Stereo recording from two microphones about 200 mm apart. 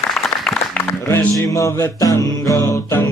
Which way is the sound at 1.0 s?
15° left (ahead or behind).